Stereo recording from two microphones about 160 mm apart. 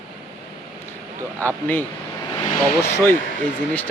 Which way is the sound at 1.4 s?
10° left (ahead or behind).